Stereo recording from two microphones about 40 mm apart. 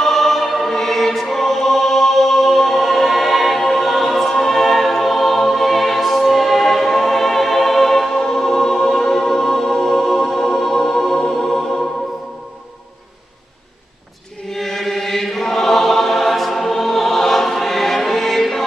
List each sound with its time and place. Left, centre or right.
0.0 s choir: centre
8.2 s music: centre
14.5 s chant: centre